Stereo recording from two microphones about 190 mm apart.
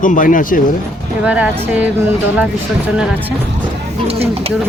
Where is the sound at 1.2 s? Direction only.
5° right (ahead or behind).